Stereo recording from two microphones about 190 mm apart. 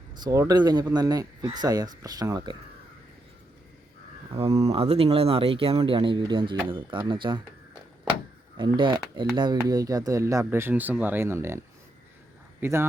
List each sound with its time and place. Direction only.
0.2 s speech: 20° right (ahead or behind)
4.6 s speech: 30° right (ahead or behind)
8.5 s speech: 25° right (ahead or behind)